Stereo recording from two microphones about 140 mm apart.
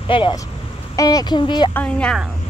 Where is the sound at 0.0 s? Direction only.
35° left (ahead or behind).